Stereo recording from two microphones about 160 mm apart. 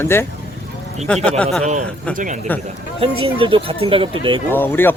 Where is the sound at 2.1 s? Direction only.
50° right (ahead or behind).